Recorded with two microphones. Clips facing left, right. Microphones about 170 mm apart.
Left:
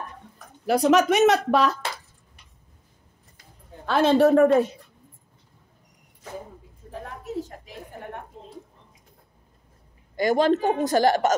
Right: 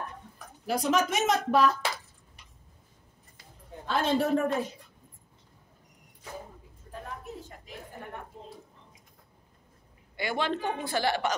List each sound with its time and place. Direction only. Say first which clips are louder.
0.7 s speech: left 8 dB; 70° left (ahead or behind)
3.8 s speech: left 9 dB; 80° left
6.9 s a sound: left 6 dB; 90° left
10.1 s a man's voice: left 10 dB; 40° left (ahead or behind)